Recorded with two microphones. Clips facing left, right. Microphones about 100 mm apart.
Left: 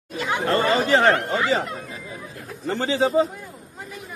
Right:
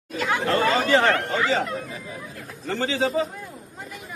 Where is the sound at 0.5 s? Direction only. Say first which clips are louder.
Left 1 dB; 30° left (ahead or behind).